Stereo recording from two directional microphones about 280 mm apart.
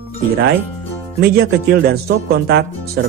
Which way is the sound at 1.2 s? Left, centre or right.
Right.